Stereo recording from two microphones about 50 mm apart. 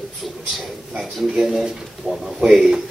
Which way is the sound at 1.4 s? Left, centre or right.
Centre.